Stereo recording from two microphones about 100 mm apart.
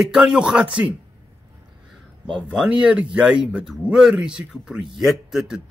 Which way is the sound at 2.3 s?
10° right (ahead or behind).